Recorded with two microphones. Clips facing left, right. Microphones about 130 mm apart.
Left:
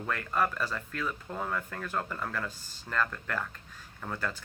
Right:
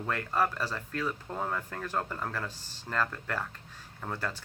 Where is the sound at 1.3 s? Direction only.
25° right (ahead or behind).